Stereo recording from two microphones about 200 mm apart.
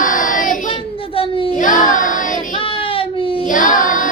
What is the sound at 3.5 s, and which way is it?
Singing, 40° left (ahead or behind).